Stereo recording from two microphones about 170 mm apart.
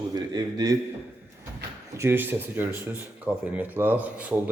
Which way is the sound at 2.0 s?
10° right (ahead or behind).